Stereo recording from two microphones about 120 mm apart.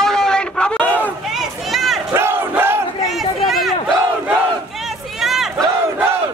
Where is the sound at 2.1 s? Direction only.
20° right (ahead or behind).